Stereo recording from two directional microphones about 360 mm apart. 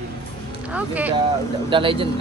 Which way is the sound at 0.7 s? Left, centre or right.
Centre.